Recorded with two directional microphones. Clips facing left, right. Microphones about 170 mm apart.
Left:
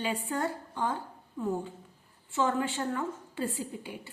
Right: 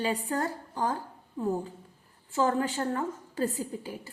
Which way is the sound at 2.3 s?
40° right (ahead or behind).